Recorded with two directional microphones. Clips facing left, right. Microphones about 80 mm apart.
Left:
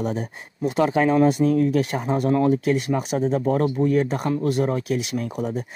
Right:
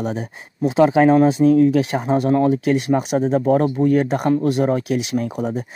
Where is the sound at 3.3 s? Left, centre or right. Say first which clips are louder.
Right 5 dB; right.